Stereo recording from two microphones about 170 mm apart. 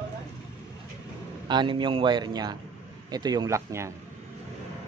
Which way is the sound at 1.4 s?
25° right (ahead or behind).